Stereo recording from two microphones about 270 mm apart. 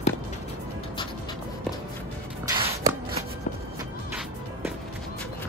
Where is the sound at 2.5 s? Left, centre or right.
Centre.